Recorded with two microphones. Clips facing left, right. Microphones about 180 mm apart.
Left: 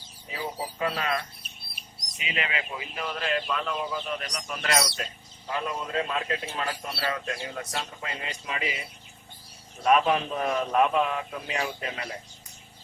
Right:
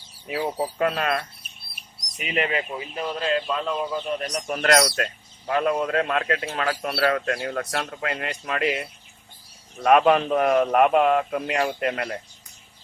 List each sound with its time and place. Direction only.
0.3 s a man's voice: 65° right (ahead or behind); by 4.0 s 30° right (ahead or behind)
4.2 s a man's voice: 45° right (ahead or behind); by 12.0 s 65° right (ahead or behind)